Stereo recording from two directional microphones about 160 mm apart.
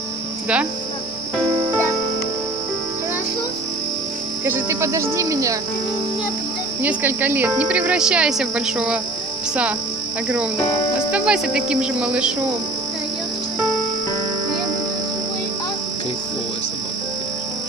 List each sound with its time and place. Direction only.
4.5 s speech: 15° right (ahead or behind)
6.8 s speech: 10° right (ahead or behind)
11.1 s speech: 5° right (ahead or behind)